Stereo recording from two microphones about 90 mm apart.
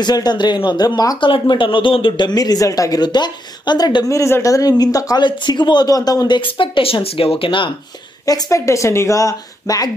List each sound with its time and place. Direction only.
0.0 s speech: 50° left (ahead or behind)
1.2 s speech: 65° left (ahead or behind); by 4.2 s 50° left (ahead or behind)
4.2 s speech: 35° left (ahead or behind); by 7.7 s 75° left (ahead or behind)
8.3 s speech: 40° left (ahead or behind)